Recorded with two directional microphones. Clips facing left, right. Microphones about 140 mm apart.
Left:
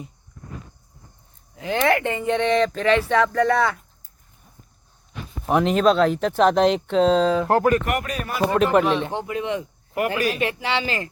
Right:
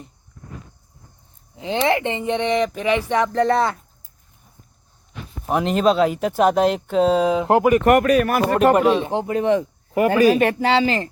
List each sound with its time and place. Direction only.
1.5 s speech: 25° right (ahead or behind)
5.5 s speech: centre (ahead or behind)
7.9 s speech: 60° right (ahead or behind)
8.9 s speech: 15° right (ahead or behind)
9.1 s speech: 40° right (ahead or behind)